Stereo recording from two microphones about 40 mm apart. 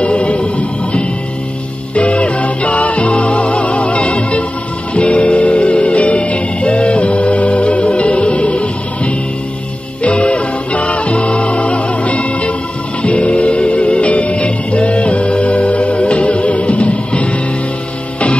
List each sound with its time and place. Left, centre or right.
0.0 s music: left